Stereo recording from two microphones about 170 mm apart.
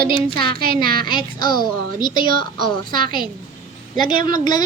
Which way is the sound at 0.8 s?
60° right (ahead or behind).